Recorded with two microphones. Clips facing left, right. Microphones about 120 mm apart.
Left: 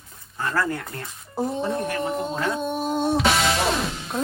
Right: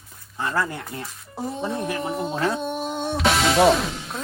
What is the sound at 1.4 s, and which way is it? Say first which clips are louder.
Speech: left 2 dB; centre (ahead or behind).